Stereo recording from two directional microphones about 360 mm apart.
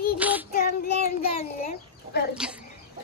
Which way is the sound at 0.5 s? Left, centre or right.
Left.